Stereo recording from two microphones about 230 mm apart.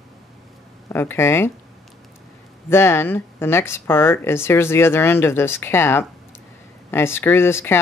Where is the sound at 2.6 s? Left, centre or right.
Centre.